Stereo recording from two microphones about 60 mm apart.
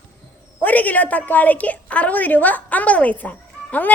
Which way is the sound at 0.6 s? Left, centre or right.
Left.